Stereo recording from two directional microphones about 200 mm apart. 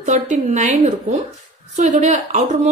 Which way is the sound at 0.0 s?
35° right (ahead or behind).